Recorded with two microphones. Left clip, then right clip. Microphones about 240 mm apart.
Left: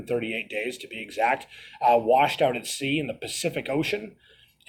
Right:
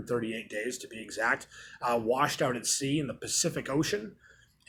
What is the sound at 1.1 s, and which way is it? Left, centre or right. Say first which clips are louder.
Speech: left 6 dB; centre.